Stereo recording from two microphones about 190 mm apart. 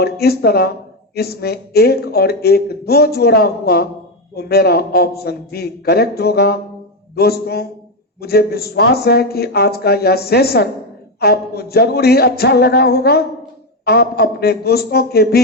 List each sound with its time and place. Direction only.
0.0 s speech: 55° left (ahead or behind)